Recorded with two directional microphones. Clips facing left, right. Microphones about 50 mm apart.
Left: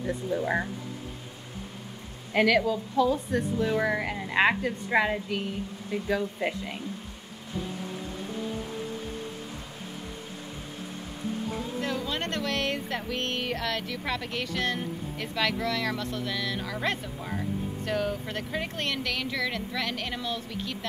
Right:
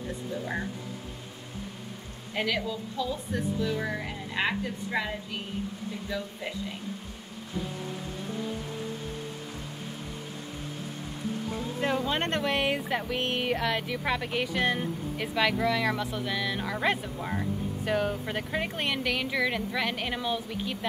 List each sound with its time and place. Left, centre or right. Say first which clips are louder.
2.3 s a woman's voice: left 7 dB; left
11.8 s speech: right 5 dB; right